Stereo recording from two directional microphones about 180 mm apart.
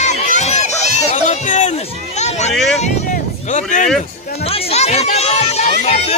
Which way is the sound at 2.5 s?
Centre (ahead or behind).